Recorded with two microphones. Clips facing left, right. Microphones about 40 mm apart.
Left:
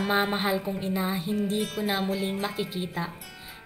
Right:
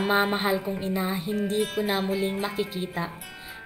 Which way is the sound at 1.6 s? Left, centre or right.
Centre.